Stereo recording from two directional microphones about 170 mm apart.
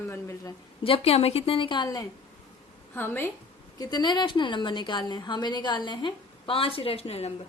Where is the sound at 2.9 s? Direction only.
10° left (ahead or behind).